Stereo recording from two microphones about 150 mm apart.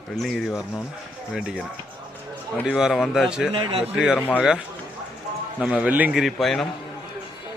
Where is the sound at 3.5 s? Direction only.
35° right (ahead or behind).